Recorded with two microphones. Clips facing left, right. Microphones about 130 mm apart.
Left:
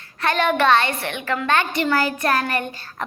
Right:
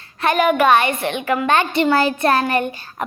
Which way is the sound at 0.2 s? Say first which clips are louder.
Right 4 dB; 15° right (ahead or behind).